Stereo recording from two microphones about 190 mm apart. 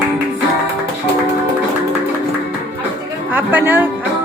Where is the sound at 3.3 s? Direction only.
10° right (ahead or behind).